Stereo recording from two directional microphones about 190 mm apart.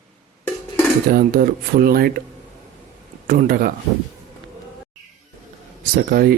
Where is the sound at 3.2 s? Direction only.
50° right (ahead or behind).